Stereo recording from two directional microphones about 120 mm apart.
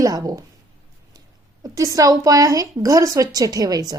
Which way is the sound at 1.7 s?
30° right (ahead or behind).